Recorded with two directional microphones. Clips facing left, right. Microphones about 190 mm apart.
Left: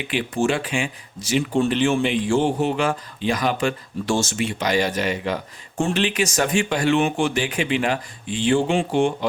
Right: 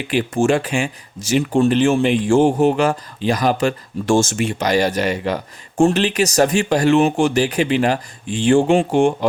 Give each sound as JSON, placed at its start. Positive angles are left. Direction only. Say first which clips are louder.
{"t": 0.1, "sound": "speech", "louder": "right 5 dB", "side_deg": -45}